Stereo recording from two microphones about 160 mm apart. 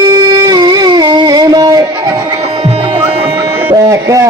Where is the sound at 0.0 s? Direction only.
25° right (ahead or behind).